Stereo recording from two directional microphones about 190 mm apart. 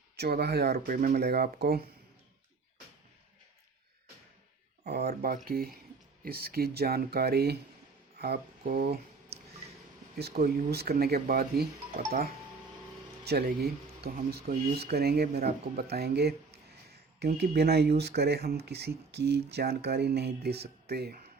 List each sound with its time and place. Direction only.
0.2 s speech: 60° right (ahead or behind)
4.8 s speech: 55° right (ahead or behind)
9.3 s a sound: 60° right (ahead or behind)
10.2 s speech: 55° right (ahead or behind)
13.2 s speech: 55° right (ahead or behind)